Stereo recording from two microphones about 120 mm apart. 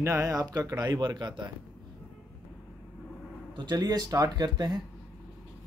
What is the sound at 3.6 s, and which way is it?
Speech, 35° right (ahead or behind).